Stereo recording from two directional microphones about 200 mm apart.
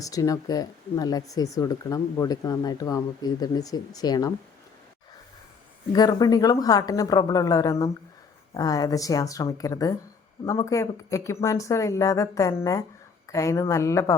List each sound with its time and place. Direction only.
0.0 s speech: 15° left (ahead or behind)
5.9 s speech: 20° left (ahead or behind)